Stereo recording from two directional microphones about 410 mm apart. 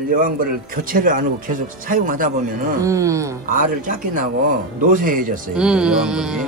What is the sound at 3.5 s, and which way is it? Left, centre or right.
A man's voice, centre.